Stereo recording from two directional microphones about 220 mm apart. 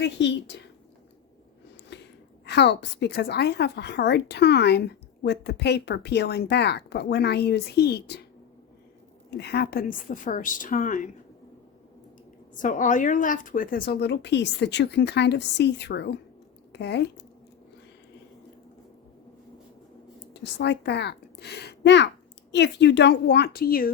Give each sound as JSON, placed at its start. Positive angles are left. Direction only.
{"t": 0.0, "sound": "a woman's voice", "side_deg": 50}
{"t": 1.9, "sound": "a sound", "side_deg": 50}
{"t": 2.5, "sound": "a woman's voice", "side_deg": 50}
{"t": 9.4, "sound": "a woman's voice", "side_deg": 45}
{"t": 12.5, "sound": "a woman's voice", "side_deg": 35}
{"t": 20.3, "sound": "a woman's voice", "side_deg": 50}